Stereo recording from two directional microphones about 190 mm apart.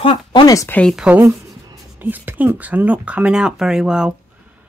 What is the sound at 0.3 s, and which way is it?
Speech, 20° left (ahead or behind).